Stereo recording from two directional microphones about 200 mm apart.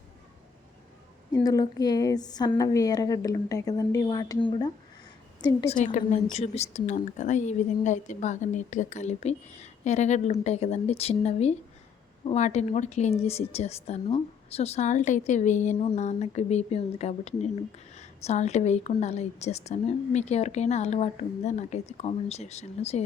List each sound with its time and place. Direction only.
1.3 s a woman's voice: 20° left (ahead or behind)
5.6 s a woman's voice: 35° left (ahead or behind)